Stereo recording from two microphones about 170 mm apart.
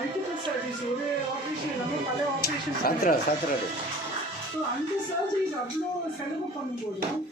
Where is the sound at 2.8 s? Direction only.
60° left (ahead or behind).